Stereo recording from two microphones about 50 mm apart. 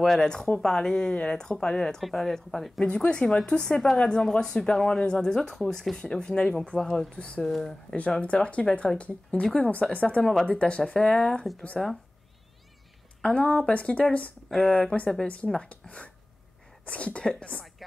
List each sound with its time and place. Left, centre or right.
0.0 s speech: centre
2.8 s speech: left
7.2 s speech: left
7.4 s speech: centre
8.2 s speech: left
11.7 s speech: centre
13.2 s speech: left